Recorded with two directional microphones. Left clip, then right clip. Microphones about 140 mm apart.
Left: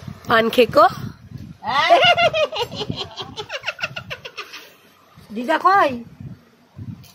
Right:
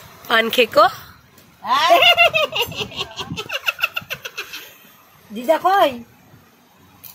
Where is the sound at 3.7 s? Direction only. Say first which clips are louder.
Right 7 dB; 40° right (ahead or behind).